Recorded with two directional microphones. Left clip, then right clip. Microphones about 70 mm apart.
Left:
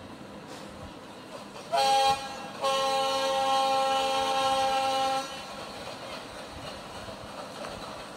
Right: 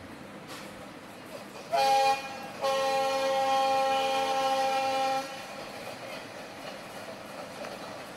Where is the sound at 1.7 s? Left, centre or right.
Left.